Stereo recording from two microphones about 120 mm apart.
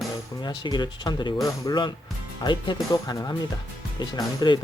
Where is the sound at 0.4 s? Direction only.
35° left (ahead or behind).